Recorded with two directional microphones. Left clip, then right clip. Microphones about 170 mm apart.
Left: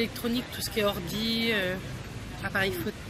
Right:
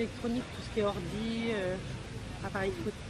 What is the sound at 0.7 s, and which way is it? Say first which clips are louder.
Speech: left 4 dB; 15° left (ahead or behind).